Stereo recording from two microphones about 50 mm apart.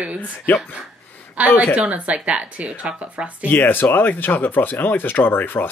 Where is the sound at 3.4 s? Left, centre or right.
Left.